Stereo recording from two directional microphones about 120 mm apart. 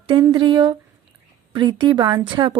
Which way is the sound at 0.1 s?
40° right (ahead or behind).